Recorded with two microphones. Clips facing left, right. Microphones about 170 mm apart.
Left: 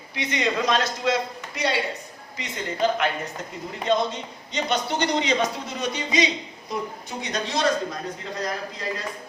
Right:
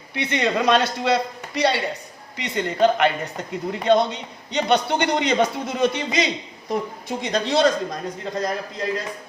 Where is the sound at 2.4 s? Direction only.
65° right (ahead or behind).